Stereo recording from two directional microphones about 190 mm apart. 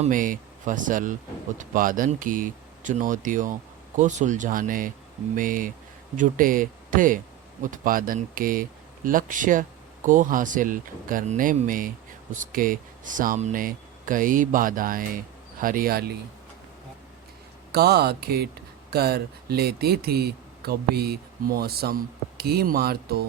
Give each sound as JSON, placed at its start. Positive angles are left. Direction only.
{"t": 0.0, "sound": "speech", "side_deg": -45}
{"t": 17.7, "sound": "speech", "side_deg": -55}